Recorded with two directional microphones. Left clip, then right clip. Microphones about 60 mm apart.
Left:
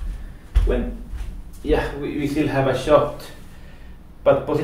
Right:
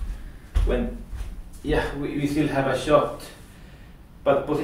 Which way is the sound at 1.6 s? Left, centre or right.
Centre.